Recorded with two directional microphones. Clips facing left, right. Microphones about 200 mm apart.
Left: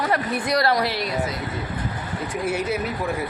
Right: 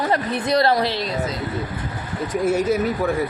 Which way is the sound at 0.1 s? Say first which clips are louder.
Right 2 dB; 25° right (ahead or behind).